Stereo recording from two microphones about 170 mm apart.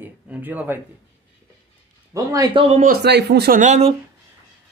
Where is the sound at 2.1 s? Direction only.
20° right (ahead or behind).